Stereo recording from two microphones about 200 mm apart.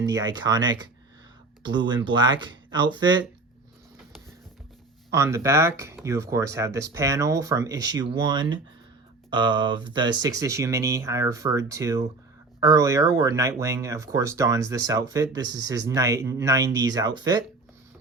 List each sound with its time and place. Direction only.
0.0 s speech: 20° right (ahead or behind)
2.0 s speech: 20° right (ahead or behind)
5.1 s speech: 15° right (ahead or behind)